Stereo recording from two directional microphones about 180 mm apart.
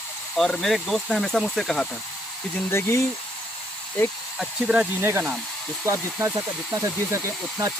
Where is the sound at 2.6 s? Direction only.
15° left (ahead or behind).